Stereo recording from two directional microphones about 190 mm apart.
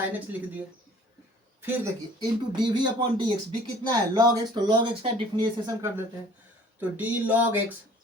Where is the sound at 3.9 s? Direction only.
20° right (ahead or behind).